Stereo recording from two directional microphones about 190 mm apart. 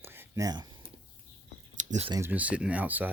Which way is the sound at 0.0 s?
10° right (ahead or behind).